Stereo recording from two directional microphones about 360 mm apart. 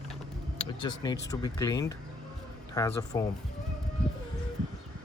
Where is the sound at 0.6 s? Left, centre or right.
Centre.